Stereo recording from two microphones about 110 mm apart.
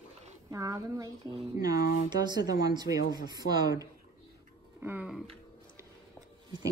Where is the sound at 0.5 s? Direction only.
30° right (ahead or behind).